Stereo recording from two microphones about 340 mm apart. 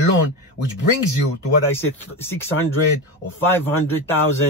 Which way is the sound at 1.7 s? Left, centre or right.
Centre.